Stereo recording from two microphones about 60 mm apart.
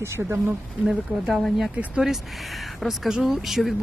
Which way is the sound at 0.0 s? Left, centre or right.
Right.